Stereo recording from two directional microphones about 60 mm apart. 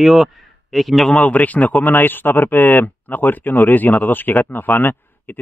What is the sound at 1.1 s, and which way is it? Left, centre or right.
Speech, left.